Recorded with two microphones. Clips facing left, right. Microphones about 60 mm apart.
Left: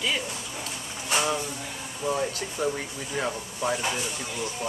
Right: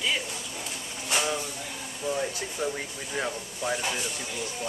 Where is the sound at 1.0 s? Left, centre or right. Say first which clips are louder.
Left 2 dB; centre.